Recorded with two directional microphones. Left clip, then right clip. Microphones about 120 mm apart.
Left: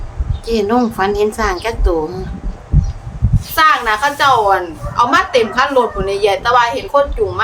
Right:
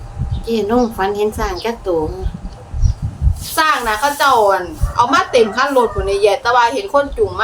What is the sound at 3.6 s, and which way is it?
A woman's voice, 15° left (ahead or behind).